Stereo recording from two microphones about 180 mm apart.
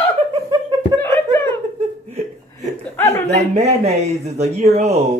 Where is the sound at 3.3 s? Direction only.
40° right (ahead or behind).